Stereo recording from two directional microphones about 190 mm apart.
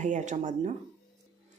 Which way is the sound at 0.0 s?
40° right (ahead or behind).